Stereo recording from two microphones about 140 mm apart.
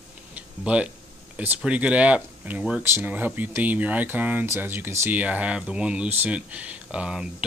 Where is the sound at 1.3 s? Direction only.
10° right (ahead or behind).